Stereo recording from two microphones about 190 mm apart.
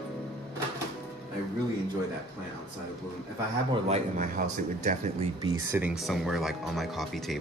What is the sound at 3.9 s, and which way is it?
A man's voice, 40° right (ahead or behind).